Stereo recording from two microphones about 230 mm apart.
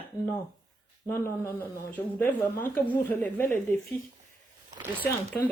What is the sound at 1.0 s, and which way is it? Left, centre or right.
A woman's voice, centre.